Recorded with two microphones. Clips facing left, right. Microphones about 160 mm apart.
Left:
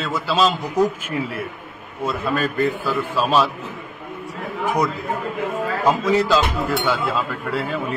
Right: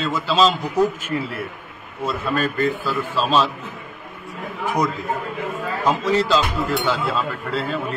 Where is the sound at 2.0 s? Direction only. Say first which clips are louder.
Even; 10° left (ahead or behind).